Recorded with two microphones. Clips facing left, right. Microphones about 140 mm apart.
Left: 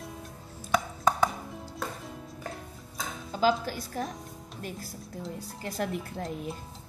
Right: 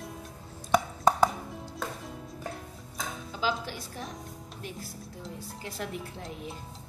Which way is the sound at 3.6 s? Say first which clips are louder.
Left 5 dB; 45° left (ahead or behind).